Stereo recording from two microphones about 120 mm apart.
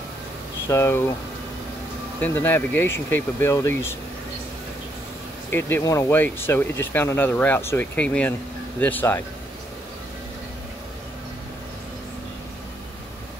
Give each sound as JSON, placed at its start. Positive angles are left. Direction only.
{"t": 0.7, "sound": "speech", "side_deg": 25}
{"t": 2.1, "sound": "speech", "side_deg": 15}
{"t": 5.5, "sound": "speech", "side_deg": 20}